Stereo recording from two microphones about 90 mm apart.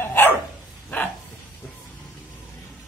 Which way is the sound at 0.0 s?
25° left (ahead or behind).